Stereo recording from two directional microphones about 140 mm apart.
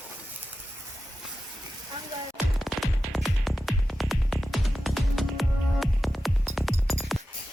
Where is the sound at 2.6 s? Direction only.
Centre (ahead or behind).